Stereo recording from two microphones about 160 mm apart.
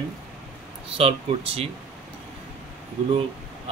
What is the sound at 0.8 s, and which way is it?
Speech, 35° right (ahead or behind).